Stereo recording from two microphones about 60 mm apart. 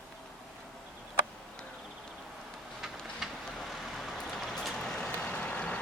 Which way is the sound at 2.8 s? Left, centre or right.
Centre.